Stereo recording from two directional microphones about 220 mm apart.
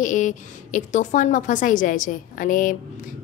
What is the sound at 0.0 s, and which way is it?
A woman's voice, 35° left (ahead or behind).